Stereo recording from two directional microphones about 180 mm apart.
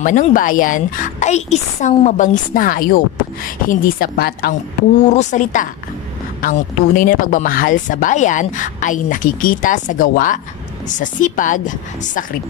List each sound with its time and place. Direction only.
0.0 s speech: 45° left (ahead or behind)
5.0 s speech: 40° left (ahead or behind)